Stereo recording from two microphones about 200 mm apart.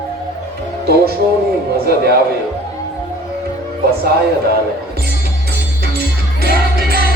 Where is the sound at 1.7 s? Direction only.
50° right (ahead or behind).